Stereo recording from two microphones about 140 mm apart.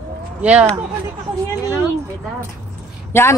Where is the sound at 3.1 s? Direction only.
15° left (ahead or behind).